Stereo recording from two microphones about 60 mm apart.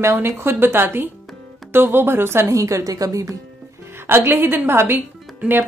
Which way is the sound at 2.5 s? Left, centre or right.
Right.